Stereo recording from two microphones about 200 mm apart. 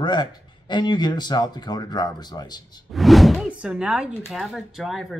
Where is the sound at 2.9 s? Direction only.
Centre (ahead or behind).